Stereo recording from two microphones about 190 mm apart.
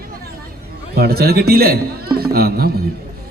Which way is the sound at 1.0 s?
55° right (ahead or behind).